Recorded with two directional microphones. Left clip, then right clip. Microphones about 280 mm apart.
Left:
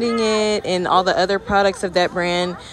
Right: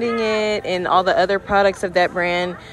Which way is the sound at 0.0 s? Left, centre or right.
Centre.